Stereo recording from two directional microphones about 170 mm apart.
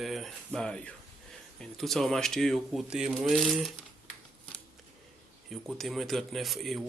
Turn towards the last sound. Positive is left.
turn(degrees=0)  # may be behind; listen again after turning